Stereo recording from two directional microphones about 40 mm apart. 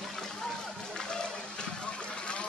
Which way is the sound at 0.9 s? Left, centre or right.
Centre.